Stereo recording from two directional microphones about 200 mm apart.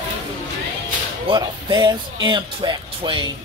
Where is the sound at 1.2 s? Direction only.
20° right (ahead or behind).